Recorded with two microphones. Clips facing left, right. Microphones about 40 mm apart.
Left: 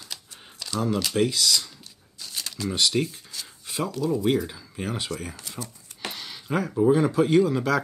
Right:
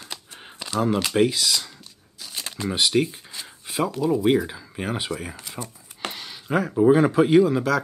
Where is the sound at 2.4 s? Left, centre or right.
Right.